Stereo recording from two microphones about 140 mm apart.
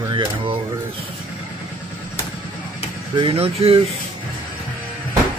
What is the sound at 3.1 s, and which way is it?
Speech, 40° right (ahead or behind).